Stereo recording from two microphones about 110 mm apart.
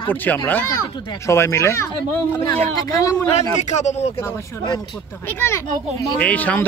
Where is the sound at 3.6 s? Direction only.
90° left.